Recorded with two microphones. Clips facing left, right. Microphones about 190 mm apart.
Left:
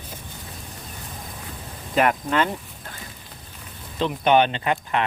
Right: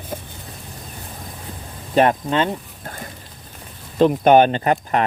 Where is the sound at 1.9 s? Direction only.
30° right (ahead or behind).